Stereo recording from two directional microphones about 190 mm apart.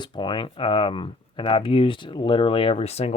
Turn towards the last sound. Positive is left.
turn(degrees=35)  # may be behind; listen again after turning